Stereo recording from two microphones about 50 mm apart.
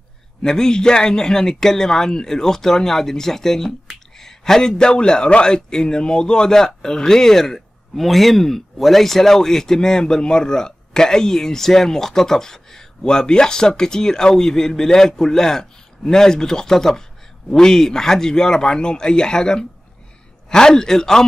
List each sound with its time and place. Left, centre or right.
0.4 s a man's voice: centre